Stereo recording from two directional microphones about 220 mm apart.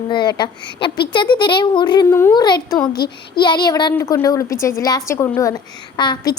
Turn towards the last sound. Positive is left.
turn(degrees=20)  # may be behind; listen again after turning